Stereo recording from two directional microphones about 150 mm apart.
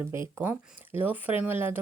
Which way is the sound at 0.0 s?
15° right (ahead or behind).